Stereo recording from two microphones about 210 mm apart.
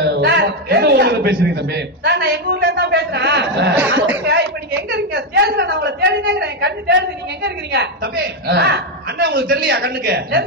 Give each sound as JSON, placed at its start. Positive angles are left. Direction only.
{"t": 0.0, "sound": "a man's voice", "side_deg": -55}